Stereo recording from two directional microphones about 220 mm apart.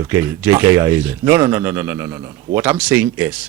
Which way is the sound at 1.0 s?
10° right (ahead or behind).